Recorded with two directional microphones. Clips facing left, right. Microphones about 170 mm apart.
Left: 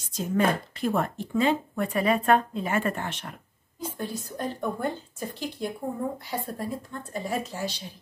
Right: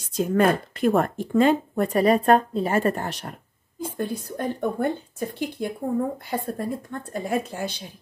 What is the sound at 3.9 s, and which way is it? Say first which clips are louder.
A woman's voice: right 6 dB; 55° right (ahead or behind).